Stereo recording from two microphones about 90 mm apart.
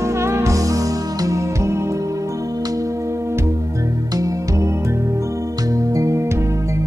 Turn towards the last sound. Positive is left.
turn(degrees=-35)  # may be behind; listen again after turning